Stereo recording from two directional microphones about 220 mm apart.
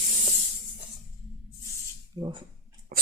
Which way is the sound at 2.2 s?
20° right (ahead or behind).